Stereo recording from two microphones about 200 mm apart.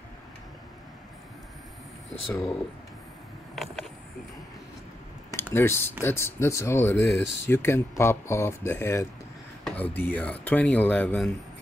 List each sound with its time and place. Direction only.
3.5 s a sound: centre (ahead or behind)
5.3 s speech: 10° left (ahead or behind)
7.1 s speech: 65° left (ahead or behind)
7.4 s speech: 10° left (ahead or behind)